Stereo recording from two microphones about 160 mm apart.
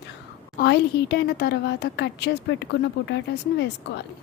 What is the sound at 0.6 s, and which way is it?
Speech, 85° left.